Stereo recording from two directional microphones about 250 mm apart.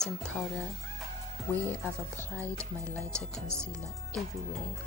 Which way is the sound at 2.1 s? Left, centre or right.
Centre.